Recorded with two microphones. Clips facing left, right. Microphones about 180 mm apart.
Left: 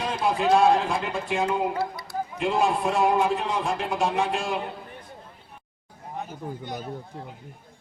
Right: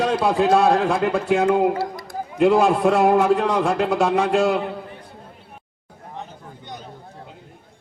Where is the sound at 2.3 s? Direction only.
70° right (ahead or behind).